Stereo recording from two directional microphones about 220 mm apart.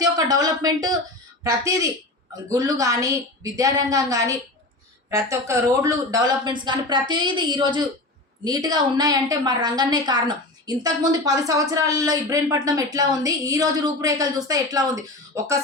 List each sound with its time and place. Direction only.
0.0 s a woman's voice: 15° right (ahead or behind)